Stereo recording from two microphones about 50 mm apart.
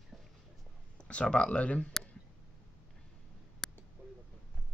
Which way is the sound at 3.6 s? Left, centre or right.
Centre.